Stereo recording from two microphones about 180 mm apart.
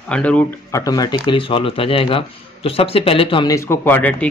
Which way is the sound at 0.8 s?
20° left (ahead or behind).